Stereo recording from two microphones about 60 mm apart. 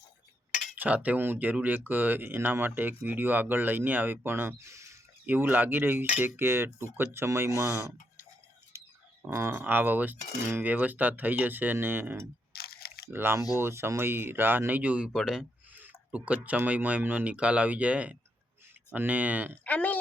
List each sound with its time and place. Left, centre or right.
0.8 s speech: right
4.5 s speech: right
5.2 s speech: right
7.5 s speech: right
8.7 s a sound: right
9.5 s speech: right
15.1 s a man's voice: centre
15.7 s a sound: right
16.1 s speech: right
19.6 s a sound: left